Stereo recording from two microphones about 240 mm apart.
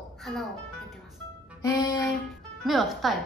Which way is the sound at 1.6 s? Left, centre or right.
Centre.